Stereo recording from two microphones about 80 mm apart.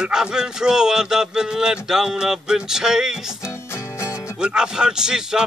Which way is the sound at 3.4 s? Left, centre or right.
Left.